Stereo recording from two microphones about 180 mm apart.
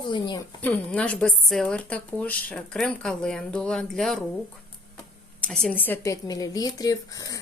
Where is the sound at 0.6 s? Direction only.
5° left (ahead or behind).